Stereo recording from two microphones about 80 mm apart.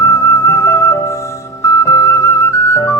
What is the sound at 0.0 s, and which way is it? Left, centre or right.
Music, left.